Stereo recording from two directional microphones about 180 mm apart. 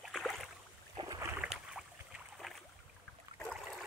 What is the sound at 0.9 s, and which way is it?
Boat, 20° right (ahead or behind).